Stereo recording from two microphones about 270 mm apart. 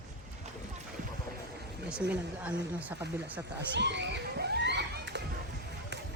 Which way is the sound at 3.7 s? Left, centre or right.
Right.